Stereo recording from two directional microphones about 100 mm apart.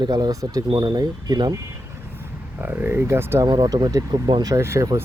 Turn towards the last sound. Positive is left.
turn(degrees=-30)  # may be behind; listen again after turning